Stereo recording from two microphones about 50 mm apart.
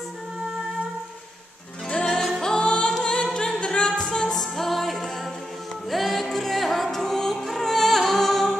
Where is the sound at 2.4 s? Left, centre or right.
Centre.